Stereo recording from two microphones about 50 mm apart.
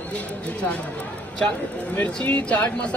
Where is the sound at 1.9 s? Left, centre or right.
Left.